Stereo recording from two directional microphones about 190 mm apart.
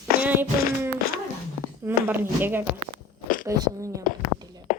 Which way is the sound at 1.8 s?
10° right (ahead or behind).